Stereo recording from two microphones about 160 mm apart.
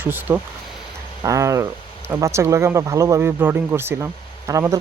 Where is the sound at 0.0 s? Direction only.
10° right (ahead or behind).